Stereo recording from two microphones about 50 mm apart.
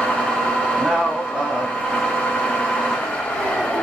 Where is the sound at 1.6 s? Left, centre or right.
Centre.